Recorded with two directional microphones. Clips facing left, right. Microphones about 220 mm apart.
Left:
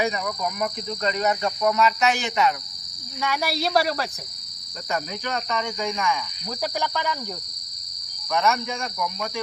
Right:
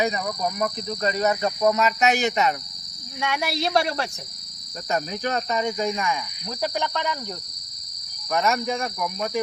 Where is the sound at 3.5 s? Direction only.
Centre (ahead or behind).